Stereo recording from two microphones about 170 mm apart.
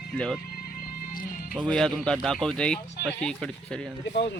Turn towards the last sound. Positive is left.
turn(degrees=90)